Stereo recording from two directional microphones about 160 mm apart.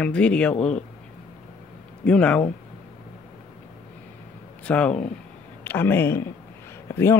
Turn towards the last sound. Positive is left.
turn(degrees=15)  # may be behind; listen again after turning